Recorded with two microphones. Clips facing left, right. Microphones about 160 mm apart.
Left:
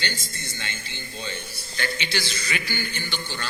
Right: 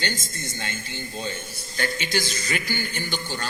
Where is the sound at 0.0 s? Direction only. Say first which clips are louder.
Right 3 dB; 45° right (ahead or behind).